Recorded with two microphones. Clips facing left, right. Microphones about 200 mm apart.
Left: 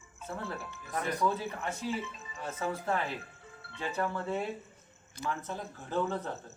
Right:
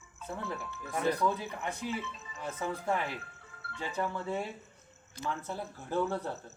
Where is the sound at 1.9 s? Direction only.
15° left (ahead or behind).